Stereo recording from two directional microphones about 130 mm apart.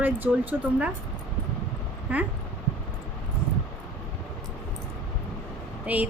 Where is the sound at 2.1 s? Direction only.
10° right (ahead or behind).